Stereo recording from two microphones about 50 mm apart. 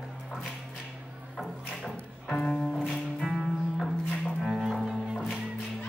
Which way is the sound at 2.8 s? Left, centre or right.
Centre.